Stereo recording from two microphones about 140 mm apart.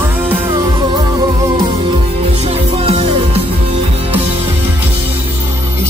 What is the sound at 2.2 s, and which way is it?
Music, 50° right (ahead or behind).